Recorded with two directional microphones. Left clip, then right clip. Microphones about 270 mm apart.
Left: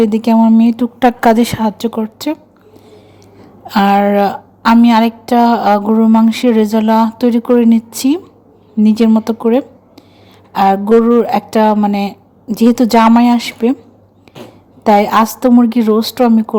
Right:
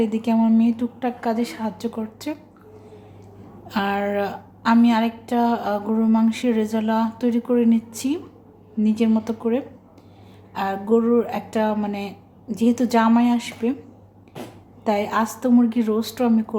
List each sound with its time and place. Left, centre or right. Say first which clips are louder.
0.0 s a woman's voice: left 10 dB; left
3.7 s a woman's voice: left 12 dB; left
14.8 s a woman's voice: left 12 dB; left